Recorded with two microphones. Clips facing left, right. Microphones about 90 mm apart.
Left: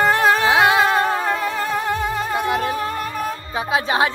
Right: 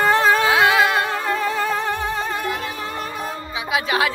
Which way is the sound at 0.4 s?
25° left (ahead or behind).